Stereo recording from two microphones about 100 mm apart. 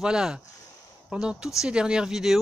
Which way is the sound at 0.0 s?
5° right (ahead or behind).